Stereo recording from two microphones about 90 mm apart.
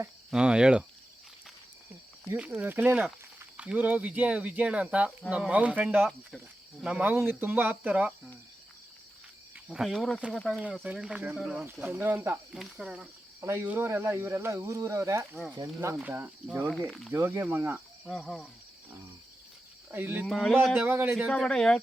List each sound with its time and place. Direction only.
0.3 s speech: 10° right (ahead or behind)
2.3 s speech: 15° right (ahead or behind)
9.7 s speech: centre (ahead or behind)
11.6 s speech: 20° right (ahead or behind)
12.7 s speech: 5° right (ahead or behind)
13.4 s speech: 30° right (ahead or behind)
16.0 s speech: 20° right (ahead or behind)
16.6 s speech: 5° left (ahead or behind)
17.1 s speech: 30° right (ahead or behind)
18.1 s speech: 5° left (ahead or behind)
19.9 s speech: 20° right (ahead or behind)
20.2 s speech: 5° left (ahead or behind)
20.8 s speech: 20° right (ahead or behind)
21.2 s speech: 5° left (ahead or behind)